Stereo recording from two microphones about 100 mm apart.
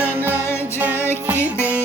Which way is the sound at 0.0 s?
20° right (ahead or behind).